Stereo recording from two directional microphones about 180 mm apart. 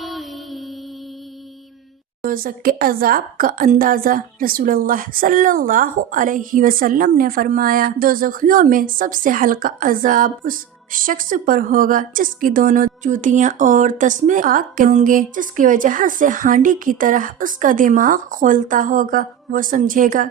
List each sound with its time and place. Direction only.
0.0 s music: centre (ahead or behind)
2.2 s a woman's voice: 50° right (ahead or behind)